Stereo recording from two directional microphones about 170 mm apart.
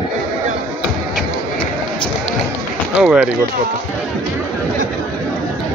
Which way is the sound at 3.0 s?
5° right (ahead or behind).